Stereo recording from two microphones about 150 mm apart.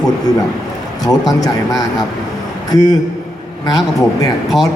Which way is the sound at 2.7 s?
25° left (ahead or behind).